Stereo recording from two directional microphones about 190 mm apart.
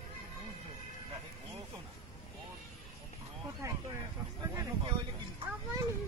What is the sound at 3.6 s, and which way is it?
Vehicle, 15° right (ahead or behind).